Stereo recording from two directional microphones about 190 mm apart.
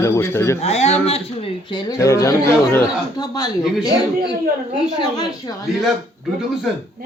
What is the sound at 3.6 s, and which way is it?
Speech, centre (ahead or behind).